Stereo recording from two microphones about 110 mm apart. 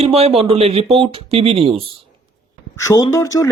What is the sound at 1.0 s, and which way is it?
Speech, 55° right (ahead or behind).